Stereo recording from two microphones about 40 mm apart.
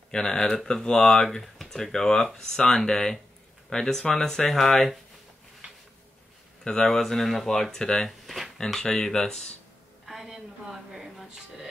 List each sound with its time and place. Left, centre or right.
0.1 s speech: centre
6.6 s speech: left
6.9 s speech: centre
7.7 s speech: centre
10.0 s a sound: centre